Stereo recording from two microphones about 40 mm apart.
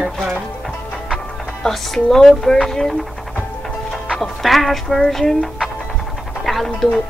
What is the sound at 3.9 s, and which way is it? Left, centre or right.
Music, centre.